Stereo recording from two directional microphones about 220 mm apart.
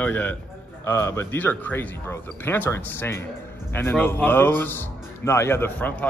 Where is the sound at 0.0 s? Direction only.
5° left (ahead or behind).